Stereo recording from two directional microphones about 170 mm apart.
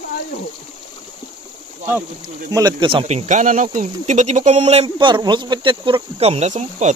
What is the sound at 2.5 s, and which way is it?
Speech, 25° right (ahead or behind).